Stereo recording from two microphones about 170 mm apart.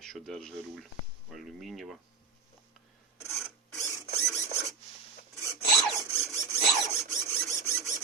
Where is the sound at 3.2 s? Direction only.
15° left (ahead or behind).